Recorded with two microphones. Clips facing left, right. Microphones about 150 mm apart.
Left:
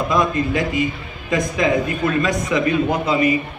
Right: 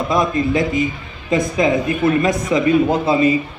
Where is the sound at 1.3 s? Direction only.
25° right (ahead or behind).